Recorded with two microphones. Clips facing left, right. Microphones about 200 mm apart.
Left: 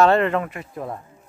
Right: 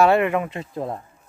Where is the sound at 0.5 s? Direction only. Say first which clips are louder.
Right 3 dB; 25° right (ahead or behind).